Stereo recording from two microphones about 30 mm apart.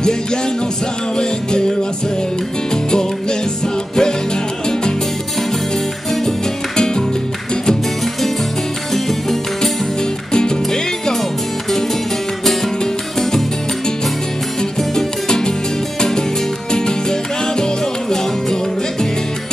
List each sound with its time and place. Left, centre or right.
1.1 s music: left
8.9 s music: centre
10.3 s music: left
14.8 s music: centre
16.7 s music: left